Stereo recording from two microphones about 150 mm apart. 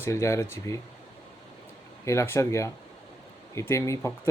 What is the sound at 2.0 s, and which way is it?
Speech, 20° left (ahead or behind).